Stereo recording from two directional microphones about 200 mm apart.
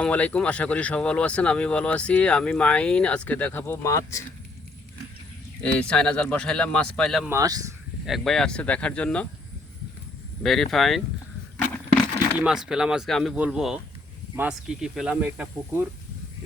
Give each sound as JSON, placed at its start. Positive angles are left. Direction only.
{"t": 0.0, "sound": "speech", "side_deg": 5}
{"t": 5.8, "sound": "speech", "side_deg": 5}
{"t": 7.3, "sound": "speech", "side_deg": -15}
{"t": 8.0, "sound": "speech", "side_deg": 0}
{"t": 10.4, "sound": "speech", "side_deg": 0}
{"t": 12.4, "sound": "speech", "side_deg": -5}